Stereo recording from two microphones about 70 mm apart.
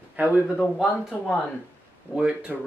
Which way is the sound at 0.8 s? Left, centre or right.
Centre.